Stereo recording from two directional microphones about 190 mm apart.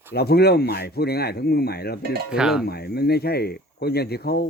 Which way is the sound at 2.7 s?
55° left (ahead or behind).